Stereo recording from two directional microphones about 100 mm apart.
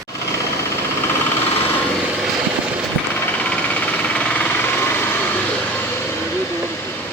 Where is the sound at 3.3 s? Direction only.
15° left (ahead or behind).